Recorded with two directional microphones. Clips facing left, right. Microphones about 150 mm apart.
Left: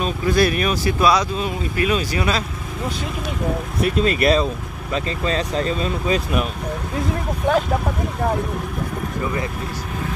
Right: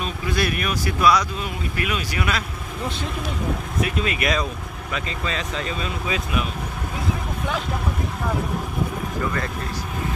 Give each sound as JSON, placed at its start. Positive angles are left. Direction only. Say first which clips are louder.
{"t": 0.0, "sound": "speech", "louder": "left 6 dB", "side_deg": 35}
{"t": 3.8, "sound": "speech", "louder": "left 7 dB", "side_deg": 35}